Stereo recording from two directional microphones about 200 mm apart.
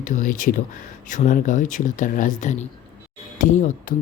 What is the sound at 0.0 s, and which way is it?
Speech, 40° left (ahead or behind).